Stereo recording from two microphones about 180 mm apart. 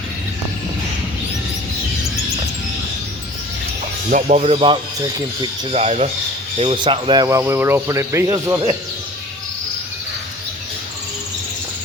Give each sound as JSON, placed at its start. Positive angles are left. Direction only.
{"t": 4.1, "sound": "speech", "side_deg": -40}